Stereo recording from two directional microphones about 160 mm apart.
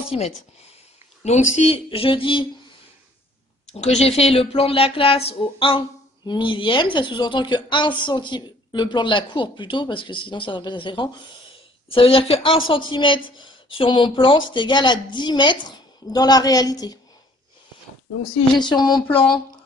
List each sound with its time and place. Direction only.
0.1 s speech: 40° left (ahead or behind)
3.7 s speech: 40° left (ahead or behind); by 17.0 s 25° left (ahead or behind)
18.6 s speech: 25° left (ahead or behind)